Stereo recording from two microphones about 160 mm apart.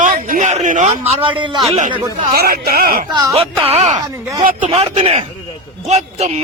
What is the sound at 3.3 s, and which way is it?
Speech, 35° right (ahead or behind).